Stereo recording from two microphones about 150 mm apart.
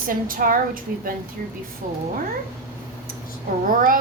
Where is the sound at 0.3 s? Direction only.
70° right (ahead or behind).